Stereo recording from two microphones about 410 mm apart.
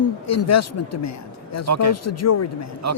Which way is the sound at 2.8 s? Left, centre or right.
Right.